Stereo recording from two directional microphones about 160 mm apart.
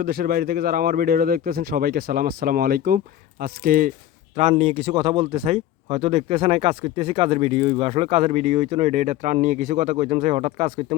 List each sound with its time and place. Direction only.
0.0 s speech: 70° right (ahead or behind)
4.4 s speech: 40° right (ahead or behind)